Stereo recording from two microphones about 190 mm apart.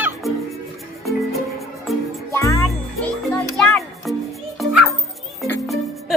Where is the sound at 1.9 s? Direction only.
Centre (ahead or behind).